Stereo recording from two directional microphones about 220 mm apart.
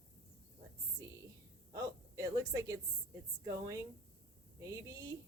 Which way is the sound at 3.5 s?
15° right (ahead or behind).